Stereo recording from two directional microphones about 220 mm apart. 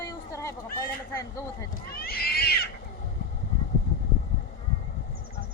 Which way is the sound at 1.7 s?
45° left (ahead or behind).